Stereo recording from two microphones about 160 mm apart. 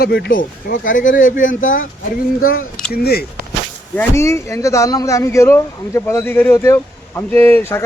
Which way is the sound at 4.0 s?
15° left (ahead or behind).